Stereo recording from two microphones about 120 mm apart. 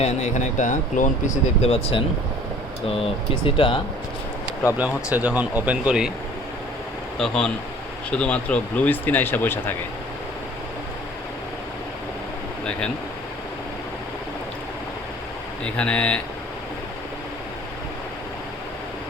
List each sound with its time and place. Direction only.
0.0 s speech: 80° left; by 2.0 s 60° left (ahead or behind)
3.4 s speech: 45° left (ahead or behind)
4.8 s speech: 15° right (ahead or behind)
7.2 s speech: 5° left (ahead or behind)
15.6 s speech: 10° left (ahead or behind)